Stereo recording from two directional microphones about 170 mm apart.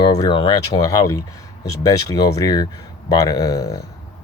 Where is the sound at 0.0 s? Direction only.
25° left (ahead or behind).